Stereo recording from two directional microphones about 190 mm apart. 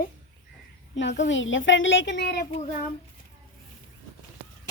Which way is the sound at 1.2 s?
85° left.